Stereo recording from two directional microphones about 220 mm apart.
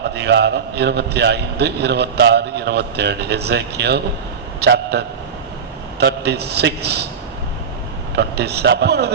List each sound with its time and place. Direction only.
0.1 s a man's voice: 50° right (ahead or behind)
8.1 s a man's voice: 50° right (ahead or behind)